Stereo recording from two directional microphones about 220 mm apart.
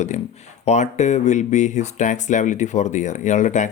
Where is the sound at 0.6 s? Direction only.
30° left (ahead or behind).